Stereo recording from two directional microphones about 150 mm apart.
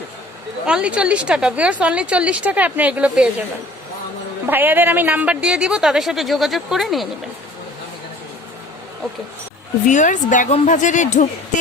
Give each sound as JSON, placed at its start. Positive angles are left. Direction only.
{"t": 0.6, "sound": "a woman's voice", "side_deg": -5}
{"t": 4.4, "sound": "a woman's voice", "side_deg": -15}
{"t": 9.8, "sound": "a woman's voice", "side_deg": 55}